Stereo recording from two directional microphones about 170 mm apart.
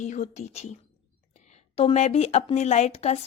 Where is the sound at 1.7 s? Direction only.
40° left (ahead or behind).